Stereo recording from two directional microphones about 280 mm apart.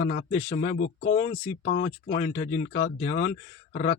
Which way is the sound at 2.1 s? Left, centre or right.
Left.